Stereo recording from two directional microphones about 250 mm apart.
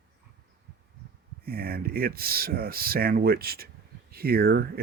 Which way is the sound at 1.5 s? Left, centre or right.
Right.